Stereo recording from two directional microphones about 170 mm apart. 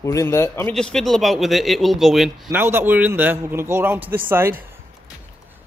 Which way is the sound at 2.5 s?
15° right (ahead or behind).